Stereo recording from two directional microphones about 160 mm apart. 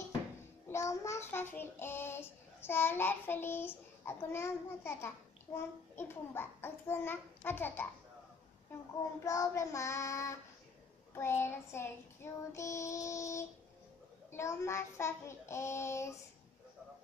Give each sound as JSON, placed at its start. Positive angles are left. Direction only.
{"t": 0.7, "sound": "child singing", "side_deg": 20}
{"t": 9.2, "sound": "child singing", "side_deg": 20}